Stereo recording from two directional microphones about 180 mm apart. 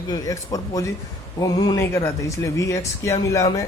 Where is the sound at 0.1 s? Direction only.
20° left (ahead or behind).